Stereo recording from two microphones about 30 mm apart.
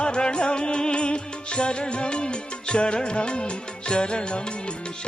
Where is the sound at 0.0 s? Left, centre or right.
Left.